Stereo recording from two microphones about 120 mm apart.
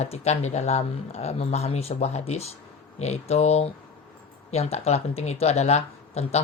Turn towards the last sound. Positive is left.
turn(degrees=65)  # may be behind; listen again after turning